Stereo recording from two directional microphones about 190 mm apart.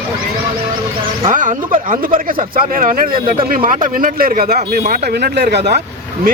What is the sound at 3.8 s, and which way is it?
Speech, 45° right (ahead or behind).